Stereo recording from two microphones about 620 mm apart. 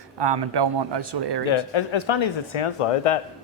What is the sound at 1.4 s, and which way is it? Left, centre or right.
Speech, left.